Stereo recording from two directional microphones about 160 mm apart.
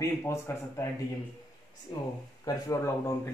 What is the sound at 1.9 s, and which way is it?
Speech, 25° left (ahead or behind).